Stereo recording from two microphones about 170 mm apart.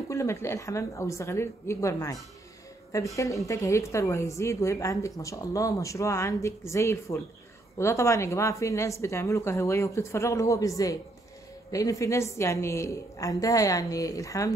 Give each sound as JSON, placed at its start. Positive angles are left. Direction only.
{"t": 0.1, "sound": "a woman's voice", "side_deg": 15}
{"t": 3.2, "sound": "a woman's voice", "side_deg": 20}